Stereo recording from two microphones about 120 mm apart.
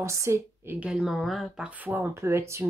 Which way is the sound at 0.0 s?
25° right (ahead or behind).